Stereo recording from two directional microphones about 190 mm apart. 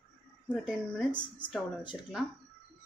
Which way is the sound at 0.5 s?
5° right (ahead or behind).